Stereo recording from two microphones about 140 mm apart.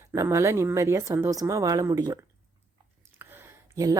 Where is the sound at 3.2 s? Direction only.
15° right (ahead or behind).